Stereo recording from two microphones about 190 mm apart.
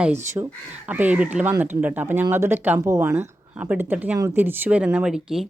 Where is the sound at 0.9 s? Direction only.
10° right (ahead or behind).